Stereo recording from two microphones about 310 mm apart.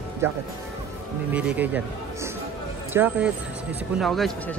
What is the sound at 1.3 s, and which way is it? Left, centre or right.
Speech, centre.